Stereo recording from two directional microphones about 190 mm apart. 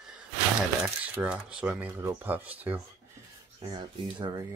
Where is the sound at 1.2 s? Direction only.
10° right (ahead or behind).